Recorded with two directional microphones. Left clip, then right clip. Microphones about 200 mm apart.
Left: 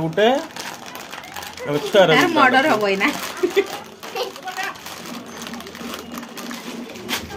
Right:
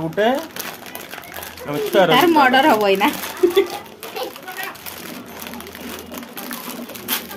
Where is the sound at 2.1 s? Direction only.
40° right (ahead or behind).